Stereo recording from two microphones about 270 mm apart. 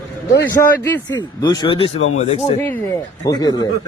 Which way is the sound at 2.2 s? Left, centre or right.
Left.